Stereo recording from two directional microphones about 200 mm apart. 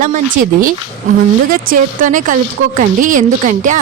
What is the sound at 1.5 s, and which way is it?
Speech, 45° right (ahead or behind).